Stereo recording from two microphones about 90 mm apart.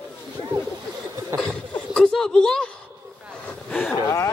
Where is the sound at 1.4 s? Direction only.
10° left (ahead or behind).